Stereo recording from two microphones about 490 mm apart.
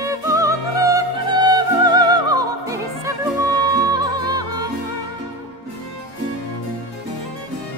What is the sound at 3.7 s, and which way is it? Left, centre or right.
Music, centre.